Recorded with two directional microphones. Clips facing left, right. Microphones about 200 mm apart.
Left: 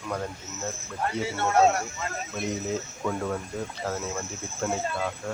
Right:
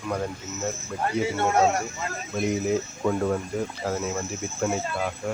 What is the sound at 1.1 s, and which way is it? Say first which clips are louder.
Speech: right 6 dB; 15° right (ahead or behind).